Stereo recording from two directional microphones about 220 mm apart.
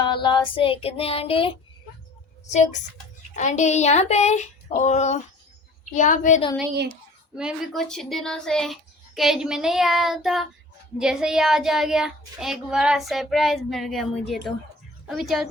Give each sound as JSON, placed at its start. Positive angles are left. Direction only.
{"t": 0.0, "sound": "child singing", "side_deg": 20}
{"t": 3.3, "sound": "a sound", "side_deg": 35}
{"t": 7.3, "sound": "a child's voice", "side_deg": 0}